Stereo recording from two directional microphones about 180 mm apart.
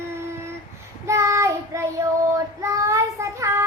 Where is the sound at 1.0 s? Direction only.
15° right (ahead or behind).